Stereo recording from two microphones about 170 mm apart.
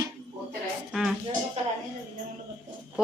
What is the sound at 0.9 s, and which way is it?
Music, centre (ahead or behind).